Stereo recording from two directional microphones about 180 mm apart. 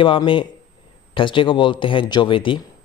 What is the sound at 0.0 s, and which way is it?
Speech, 30° left (ahead or behind).